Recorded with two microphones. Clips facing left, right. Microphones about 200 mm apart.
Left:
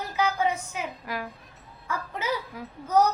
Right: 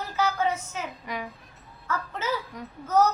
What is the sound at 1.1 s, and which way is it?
Speech, 5° left (ahead or behind).